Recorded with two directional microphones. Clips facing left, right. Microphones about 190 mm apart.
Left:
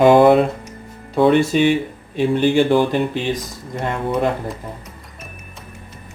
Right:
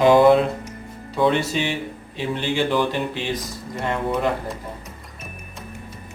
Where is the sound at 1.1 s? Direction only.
55° left (ahead or behind).